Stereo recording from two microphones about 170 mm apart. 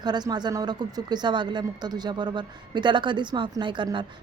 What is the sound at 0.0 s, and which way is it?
A woman's voice, 25° right (ahead or behind).